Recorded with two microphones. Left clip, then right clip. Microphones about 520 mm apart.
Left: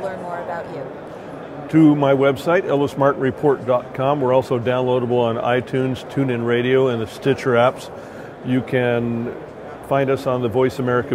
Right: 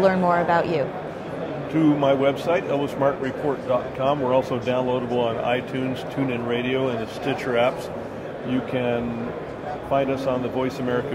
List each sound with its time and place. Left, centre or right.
0.0 s speech: right
1.7 s speech: left